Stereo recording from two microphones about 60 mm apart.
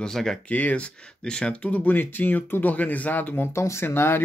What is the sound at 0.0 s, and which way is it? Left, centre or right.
Speech, centre.